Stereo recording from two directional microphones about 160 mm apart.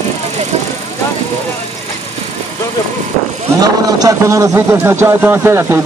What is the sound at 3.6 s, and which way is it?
A man's voice, 25° right (ahead or behind).